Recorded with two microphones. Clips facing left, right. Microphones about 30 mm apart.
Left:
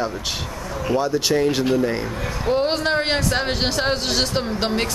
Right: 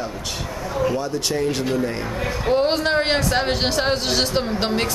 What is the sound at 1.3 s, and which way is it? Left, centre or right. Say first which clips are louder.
Speech: left 2 dB; centre.